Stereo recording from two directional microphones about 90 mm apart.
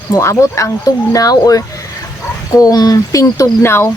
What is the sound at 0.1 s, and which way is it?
Speech, 30° left (ahead or behind).